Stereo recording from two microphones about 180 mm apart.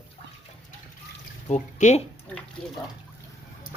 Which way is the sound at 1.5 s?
40° left (ahead or behind).